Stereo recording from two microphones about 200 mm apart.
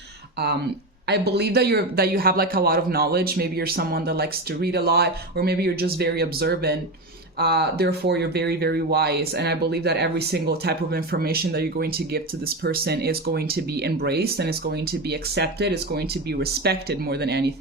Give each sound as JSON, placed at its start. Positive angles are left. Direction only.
{"t": 1.0, "sound": "a man's voice", "side_deg": -55}